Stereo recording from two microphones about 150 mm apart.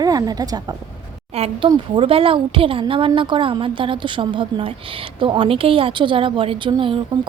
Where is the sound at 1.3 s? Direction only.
40° right (ahead or behind).